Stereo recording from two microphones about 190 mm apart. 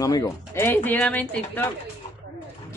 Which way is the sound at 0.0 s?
20° left (ahead or behind).